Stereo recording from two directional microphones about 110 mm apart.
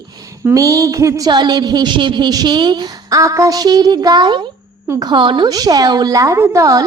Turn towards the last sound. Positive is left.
turn(degrees=-30)  # may be behind; listen again after turning